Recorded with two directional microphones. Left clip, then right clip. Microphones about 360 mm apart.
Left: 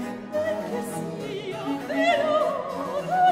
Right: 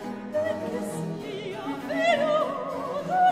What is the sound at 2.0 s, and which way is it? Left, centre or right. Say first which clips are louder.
Opera: left 1 dB; centre.